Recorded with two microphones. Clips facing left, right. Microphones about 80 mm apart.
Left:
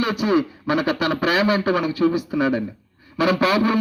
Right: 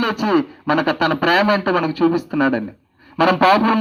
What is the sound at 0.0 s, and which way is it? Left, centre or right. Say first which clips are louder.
A man's voice: right 2 dB; right.